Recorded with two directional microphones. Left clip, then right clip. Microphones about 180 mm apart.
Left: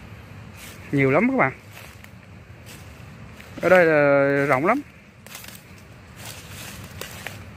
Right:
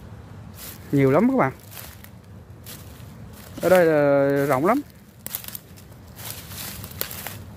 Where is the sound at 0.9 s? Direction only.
15° right (ahead or behind).